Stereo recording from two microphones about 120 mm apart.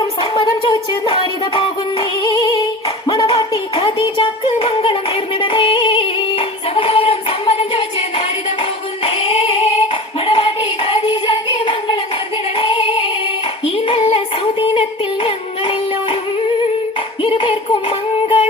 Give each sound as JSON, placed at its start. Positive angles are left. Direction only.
{"t": 0.2, "sound": "music", "side_deg": 45}
{"t": 9.0, "sound": "singing", "side_deg": 50}
{"t": 12.5, "sound": "female singing", "side_deg": 50}
{"t": 13.7, "sound": "clapping", "side_deg": 50}
{"t": 14.6, "sound": "music", "side_deg": 45}
{"t": 17.2, "sound": "child singing", "side_deg": 50}